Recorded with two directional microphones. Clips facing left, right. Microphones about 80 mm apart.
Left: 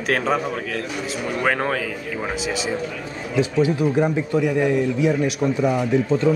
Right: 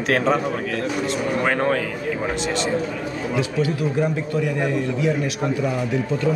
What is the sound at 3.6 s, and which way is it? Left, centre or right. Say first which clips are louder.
Speech: left 3 dB; centre.